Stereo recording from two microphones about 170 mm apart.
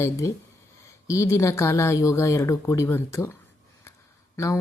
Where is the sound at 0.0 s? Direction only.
15° left (ahead or behind).